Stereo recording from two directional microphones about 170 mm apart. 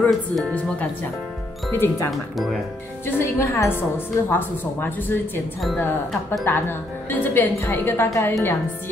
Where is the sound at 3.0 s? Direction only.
15° left (ahead or behind).